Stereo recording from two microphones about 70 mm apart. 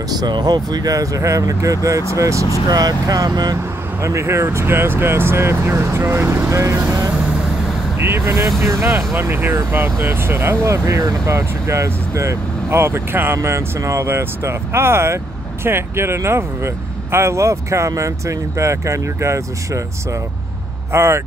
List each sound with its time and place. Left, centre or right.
0.2 s speech: right
2.7 s speech: right
4.0 s speech: right
8.0 s speech: right